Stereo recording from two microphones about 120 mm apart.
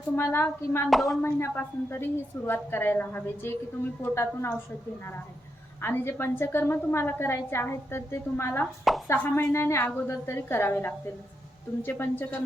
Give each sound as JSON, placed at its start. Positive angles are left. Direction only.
{"t": 0.2, "sound": "a woman's voice", "side_deg": 20}
{"t": 0.9, "sound": "a woman's voice", "side_deg": 0}
{"t": 1.2, "sound": "a woman's voice", "side_deg": 20}
{"t": 5.8, "sound": "a woman's voice", "side_deg": 20}
{"t": 8.8, "sound": "speech", "side_deg": 0}
{"t": 9.1, "sound": "a woman's voice", "side_deg": 15}